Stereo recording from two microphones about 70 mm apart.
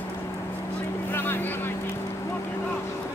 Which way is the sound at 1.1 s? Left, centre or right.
Left.